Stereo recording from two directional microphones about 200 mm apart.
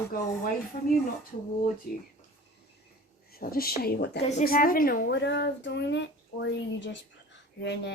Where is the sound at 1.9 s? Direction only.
50° left (ahead or behind).